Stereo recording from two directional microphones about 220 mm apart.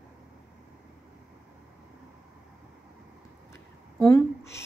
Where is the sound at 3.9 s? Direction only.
10° left (ahead or behind).